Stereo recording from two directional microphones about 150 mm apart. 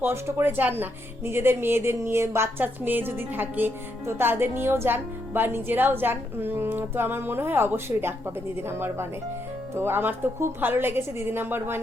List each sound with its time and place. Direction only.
0.0 s speech: 15° right (ahead or behind)